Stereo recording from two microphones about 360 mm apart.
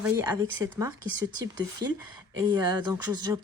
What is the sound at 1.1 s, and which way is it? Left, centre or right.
Speech, right.